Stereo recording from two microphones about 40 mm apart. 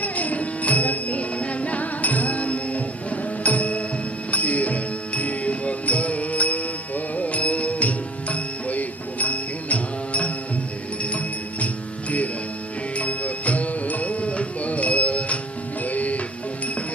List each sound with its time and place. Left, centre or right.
0.0 s music: left
13.0 s music: left